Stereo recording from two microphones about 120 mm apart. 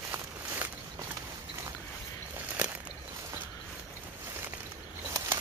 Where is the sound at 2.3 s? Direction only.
15° right (ahead or behind).